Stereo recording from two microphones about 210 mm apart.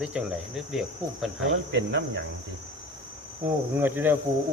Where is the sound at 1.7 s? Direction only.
55° right (ahead or behind).